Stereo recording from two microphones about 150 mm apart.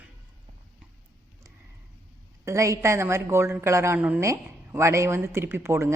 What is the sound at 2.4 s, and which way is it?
A woman's voice, 20° right (ahead or behind).